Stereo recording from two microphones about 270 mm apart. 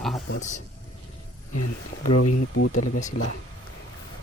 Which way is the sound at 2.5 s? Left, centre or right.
Left.